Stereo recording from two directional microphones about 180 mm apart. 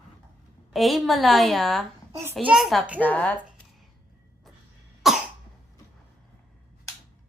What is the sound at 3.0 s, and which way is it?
Speech, 10° left (ahead or behind).